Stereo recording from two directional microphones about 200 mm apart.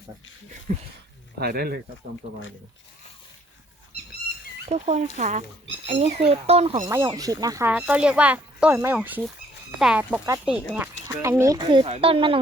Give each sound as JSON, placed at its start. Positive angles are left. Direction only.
{"t": 1.4, "sound": "speech", "side_deg": -50}
{"t": 4.7, "sound": "speech", "side_deg": -35}
{"t": 6.8, "sound": "speech", "side_deg": -15}
{"t": 7.7, "sound": "speech", "side_deg": -5}